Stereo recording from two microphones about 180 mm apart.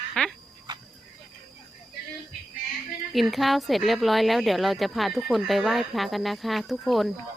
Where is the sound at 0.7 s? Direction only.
25° right (ahead or behind).